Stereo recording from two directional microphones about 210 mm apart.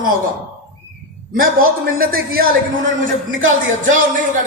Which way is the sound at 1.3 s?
45° right (ahead or behind).